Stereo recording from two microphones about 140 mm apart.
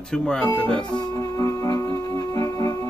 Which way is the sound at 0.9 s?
25° left (ahead or behind).